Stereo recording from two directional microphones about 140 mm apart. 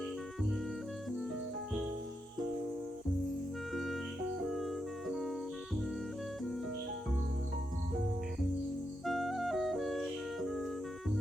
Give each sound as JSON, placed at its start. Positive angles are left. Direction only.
{"t": 3.8, "sound": "music", "side_deg": 0}
{"t": 9.0, "sound": "music", "side_deg": 0}